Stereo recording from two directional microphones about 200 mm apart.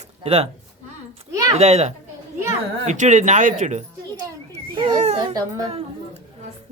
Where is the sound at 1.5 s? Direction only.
35° right (ahead or behind).